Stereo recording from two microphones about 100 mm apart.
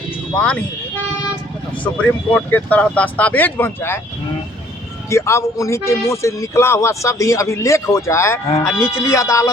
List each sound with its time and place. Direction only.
0.3 s speech: 10° left (ahead or behind)
1.8 s speech: 15° left (ahead or behind)
5.0 s speech: 30° left (ahead or behind)